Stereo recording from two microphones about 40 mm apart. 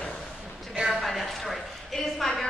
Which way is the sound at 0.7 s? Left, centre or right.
Centre.